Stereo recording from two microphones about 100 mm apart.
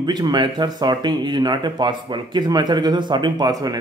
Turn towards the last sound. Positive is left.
turn(degrees=-40)  # may be behind; listen again after turning